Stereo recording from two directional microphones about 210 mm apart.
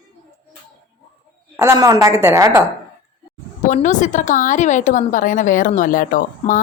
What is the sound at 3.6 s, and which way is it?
A woman's voice, 35° left (ahead or behind).